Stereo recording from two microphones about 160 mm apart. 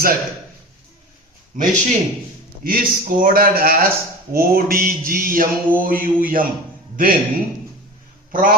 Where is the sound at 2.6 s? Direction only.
65° right (ahead or behind).